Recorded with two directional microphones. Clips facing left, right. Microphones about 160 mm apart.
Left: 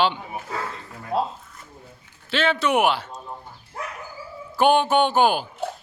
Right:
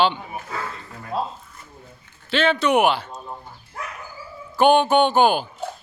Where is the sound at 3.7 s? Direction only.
30° left (ahead or behind).